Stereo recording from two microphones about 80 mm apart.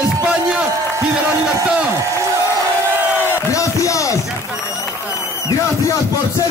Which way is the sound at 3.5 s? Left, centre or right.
Left.